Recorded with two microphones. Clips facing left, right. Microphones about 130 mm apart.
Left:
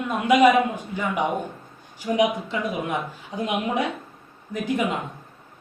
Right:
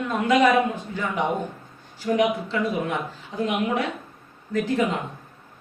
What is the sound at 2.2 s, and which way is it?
Speech, 15° left (ahead or behind).